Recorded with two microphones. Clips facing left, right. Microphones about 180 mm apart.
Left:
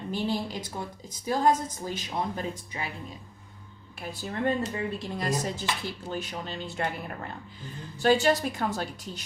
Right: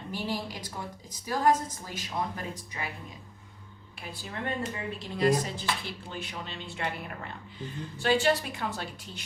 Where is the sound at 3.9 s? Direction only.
45° left (ahead or behind).